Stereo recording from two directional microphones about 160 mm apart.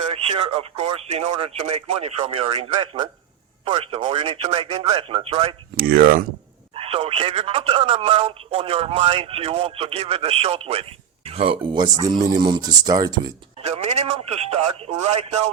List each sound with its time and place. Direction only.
0.1 s speech: 35° right (ahead or behind)
5.8 s speech: 65° right (ahead or behind)
6.7 s speech: 35° right (ahead or behind)
13.6 s speech: 40° right (ahead or behind)